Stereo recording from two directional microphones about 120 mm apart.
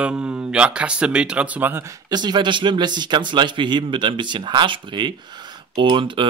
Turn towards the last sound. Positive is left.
turn(degrees=-45)  # may be behind; listen again after turning